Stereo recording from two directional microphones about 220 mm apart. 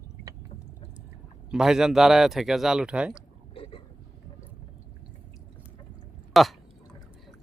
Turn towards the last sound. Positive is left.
turn(degrees=0)  # may be behind; listen again after turning